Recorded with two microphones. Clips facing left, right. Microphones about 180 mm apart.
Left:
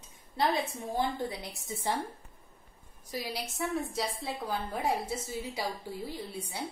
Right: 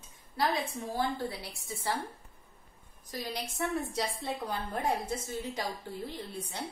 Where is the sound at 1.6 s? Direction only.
20° left (ahead or behind).